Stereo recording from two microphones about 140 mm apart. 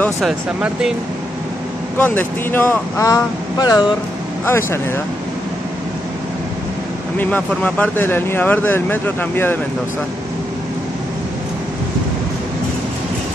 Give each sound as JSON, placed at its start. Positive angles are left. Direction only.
{"t": 0.2, "sound": "speech", "side_deg": -5}
{"t": 2.0, "sound": "speech", "side_deg": 15}
{"t": 4.5, "sound": "speech", "side_deg": 15}
{"t": 7.2, "sound": "speech", "side_deg": 10}